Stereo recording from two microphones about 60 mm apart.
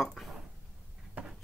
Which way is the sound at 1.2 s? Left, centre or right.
Right.